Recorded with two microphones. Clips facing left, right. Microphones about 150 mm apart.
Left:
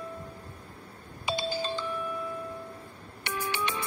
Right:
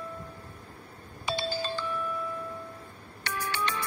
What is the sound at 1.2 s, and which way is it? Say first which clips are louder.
Music: left 1 dB; 15° left (ahead or behind).